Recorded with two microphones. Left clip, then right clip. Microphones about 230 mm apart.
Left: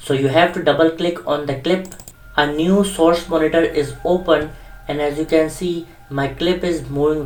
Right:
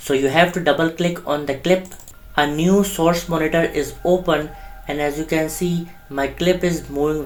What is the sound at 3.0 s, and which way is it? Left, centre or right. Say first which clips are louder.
Speech: left 3 dB; right.